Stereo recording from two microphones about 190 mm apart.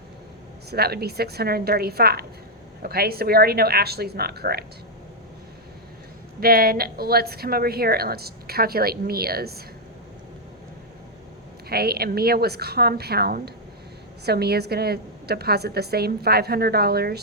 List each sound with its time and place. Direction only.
0.7 s a woman's voice: 55° right (ahead or behind)
6.4 s a woman's voice: 50° right (ahead or behind)
11.7 s a woman's voice: 55° right (ahead or behind)